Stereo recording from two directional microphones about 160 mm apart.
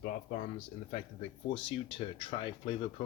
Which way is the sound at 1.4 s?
35° left (ahead or behind).